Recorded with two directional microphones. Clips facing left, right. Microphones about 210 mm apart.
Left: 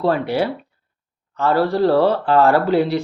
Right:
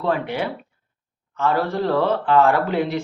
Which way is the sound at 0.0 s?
35° left (ahead or behind).